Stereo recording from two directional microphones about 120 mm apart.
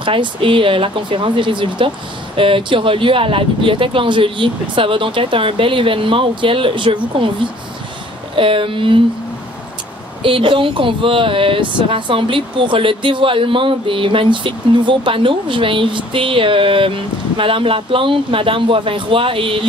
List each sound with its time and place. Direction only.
0.0 s speech: 45° right (ahead or behind)
8.4 s speech: 45° right (ahead or behind)
10.2 s speech: 45° right (ahead or behind)